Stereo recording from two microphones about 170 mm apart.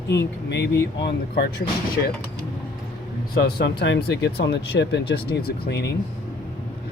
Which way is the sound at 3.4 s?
75° left (ahead or behind).